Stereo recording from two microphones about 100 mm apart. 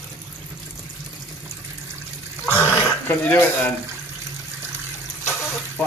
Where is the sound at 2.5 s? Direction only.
20° left (ahead or behind).